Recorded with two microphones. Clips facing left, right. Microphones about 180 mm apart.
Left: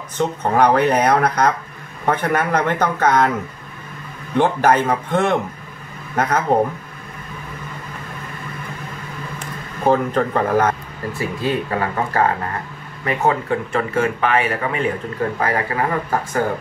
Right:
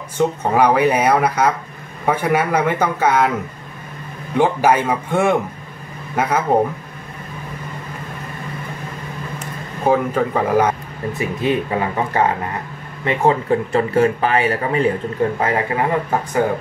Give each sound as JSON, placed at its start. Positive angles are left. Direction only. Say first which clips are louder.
{"t": 0.4, "sound": "speech", "louder": "left 1 dB", "side_deg": -10}
{"t": 4.4, "sound": "speech", "louder": "even", "side_deg": -10}
{"t": 9.8, "sound": "speech", "louder": "even", "side_deg": -5}
{"t": 13.0, "sound": "speech", "louder": "right 2 dB", "side_deg": -25}
{"t": 15.3, "sound": "speech", "louder": "right 2 dB", "side_deg": -25}